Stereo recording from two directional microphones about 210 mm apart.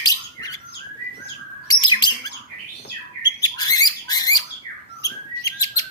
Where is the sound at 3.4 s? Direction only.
20° left (ahead or behind).